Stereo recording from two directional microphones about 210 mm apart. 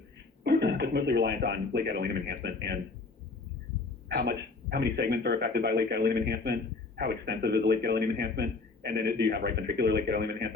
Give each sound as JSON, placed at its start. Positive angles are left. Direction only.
{"t": 0.4, "sound": "speech", "side_deg": -50}
{"t": 4.2, "sound": "a man's voice", "side_deg": -50}